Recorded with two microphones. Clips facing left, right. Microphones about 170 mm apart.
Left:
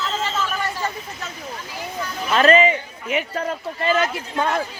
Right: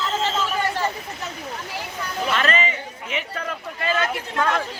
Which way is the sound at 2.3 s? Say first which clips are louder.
Left 9 dB; 40° left (ahead or behind).